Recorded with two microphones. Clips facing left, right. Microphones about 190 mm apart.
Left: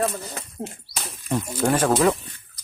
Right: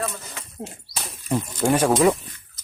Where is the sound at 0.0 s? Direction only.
35° left (ahead or behind).